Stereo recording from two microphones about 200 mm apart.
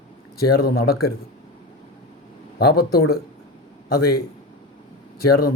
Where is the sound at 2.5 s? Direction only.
50° left (ahead or behind).